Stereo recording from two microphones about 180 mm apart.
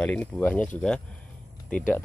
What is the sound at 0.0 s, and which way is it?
Speech, 10° left (ahead or behind).